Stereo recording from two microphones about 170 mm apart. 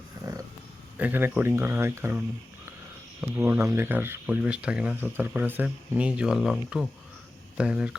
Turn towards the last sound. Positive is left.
turn(degrees=-5)  # may be behind; listen again after turning